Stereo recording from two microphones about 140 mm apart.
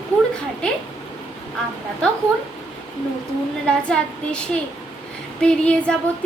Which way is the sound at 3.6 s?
5° left (ahead or behind).